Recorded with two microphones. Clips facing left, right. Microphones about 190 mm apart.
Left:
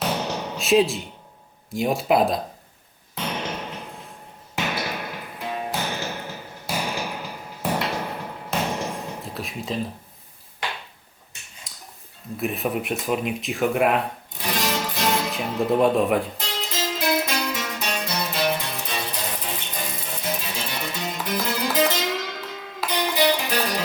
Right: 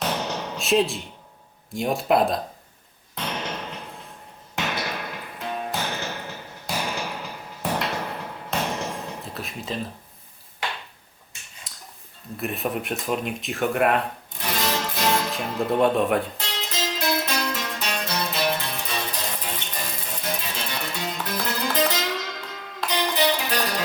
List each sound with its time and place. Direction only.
0.0 s a sound: 5° left (ahead or behind)
1.7 s speech: centre (ahead or behind)
3.2 s music: 5° left (ahead or behind)
11.7 s a sound: centre (ahead or behind)
12.4 s speech: centre (ahead or behind)
17.2 s music: 5° left (ahead or behind)